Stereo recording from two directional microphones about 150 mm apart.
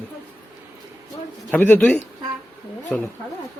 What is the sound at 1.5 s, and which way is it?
A man's voice, 10° left (ahead or behind).